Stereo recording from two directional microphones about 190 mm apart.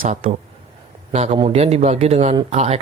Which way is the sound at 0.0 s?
40° right (ahead or behind).